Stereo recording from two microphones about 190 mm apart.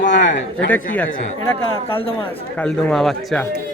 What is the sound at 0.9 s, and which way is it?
Speech, 10° left (ahead or behind).